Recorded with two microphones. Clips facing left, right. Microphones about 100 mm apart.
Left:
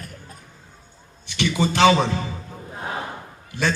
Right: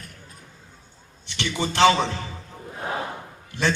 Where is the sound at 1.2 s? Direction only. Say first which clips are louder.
Left 5 dB; 15° left (ahead or behind).